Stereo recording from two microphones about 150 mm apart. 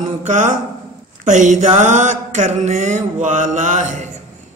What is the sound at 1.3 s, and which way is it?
A man's voice, 55° right (ahead or behind).